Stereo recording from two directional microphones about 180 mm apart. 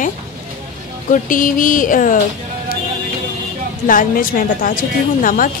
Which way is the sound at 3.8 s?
50° left (ahead or behind).